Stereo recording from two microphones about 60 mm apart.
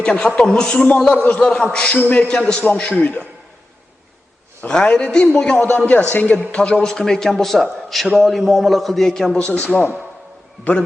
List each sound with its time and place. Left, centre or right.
0.0 s a man's voice: centre
2.2 s a man's voice: centre
2.9 s speech: left
4.7 s a man's voice: centre
5.5 s speech: left
6.5 s a man's voice: centre
9.4 s speech: left